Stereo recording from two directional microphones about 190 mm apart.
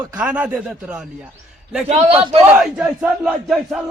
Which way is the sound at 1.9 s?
30° right (ahead or behind).